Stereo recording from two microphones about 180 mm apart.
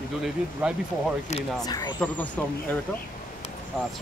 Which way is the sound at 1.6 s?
20° left (ahead or behind).